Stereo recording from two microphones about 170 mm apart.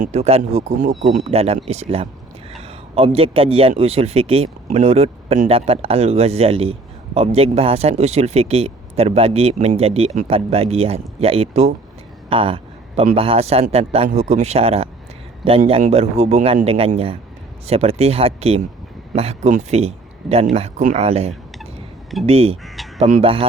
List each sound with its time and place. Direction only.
0.0 s speech: 40° right (ahead or behind)